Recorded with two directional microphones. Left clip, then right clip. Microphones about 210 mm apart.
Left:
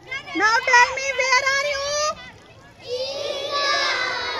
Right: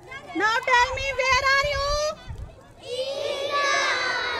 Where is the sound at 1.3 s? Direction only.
40° left (ahead or behind).